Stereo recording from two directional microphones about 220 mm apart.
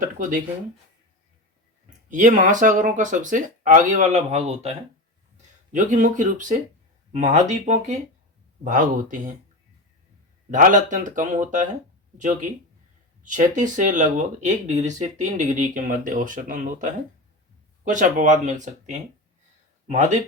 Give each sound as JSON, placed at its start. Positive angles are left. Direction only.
{"t": 0.0, "sound": "speech", "side_deg": -35}
{"t": 2.0, "sound": "speech", "side_deg": -35}
{"t": 5.7, "sound": "speech", "side_deg": -35}
{"t": 10.5, "sound": "speech", "side_deg": -35}